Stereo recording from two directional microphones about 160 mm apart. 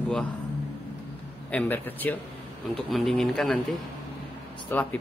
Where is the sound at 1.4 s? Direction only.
10° left (ahead or behind).